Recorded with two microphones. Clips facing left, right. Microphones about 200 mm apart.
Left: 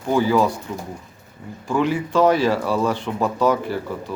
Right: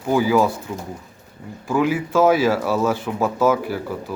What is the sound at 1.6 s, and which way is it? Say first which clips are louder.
Speech: right 1 dB; 5° right (ahead or behind).